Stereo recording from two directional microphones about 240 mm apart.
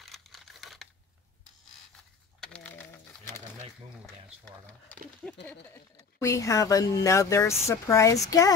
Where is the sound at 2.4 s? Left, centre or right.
Centre.